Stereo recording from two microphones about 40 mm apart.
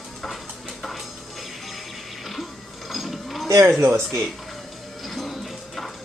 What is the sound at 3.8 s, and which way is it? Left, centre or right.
Speech, right.